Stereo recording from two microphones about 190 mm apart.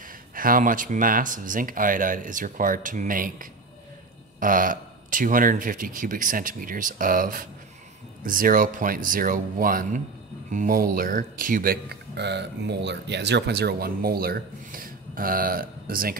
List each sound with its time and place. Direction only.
0.0 s speech: 50° right (ahead or behind)